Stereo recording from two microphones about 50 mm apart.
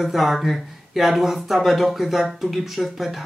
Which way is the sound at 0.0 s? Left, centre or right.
Centre.